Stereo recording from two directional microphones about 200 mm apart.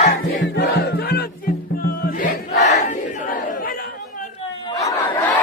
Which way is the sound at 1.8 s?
45° left (ahead or behind).